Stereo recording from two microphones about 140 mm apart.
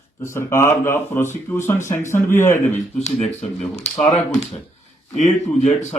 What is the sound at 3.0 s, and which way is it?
Speech, 55° left (ahead or behind).